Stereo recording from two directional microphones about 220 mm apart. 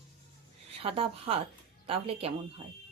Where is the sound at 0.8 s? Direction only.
25° right (ahead or behind).